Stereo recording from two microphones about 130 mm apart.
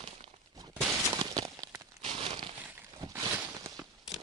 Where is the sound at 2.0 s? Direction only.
40° right (ahead or behind).